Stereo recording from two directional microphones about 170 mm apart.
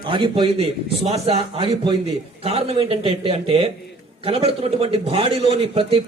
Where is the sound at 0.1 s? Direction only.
30° right (ahead or behind).